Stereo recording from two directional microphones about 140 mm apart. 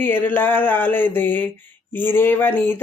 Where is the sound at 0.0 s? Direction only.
15° left (ahead or behind).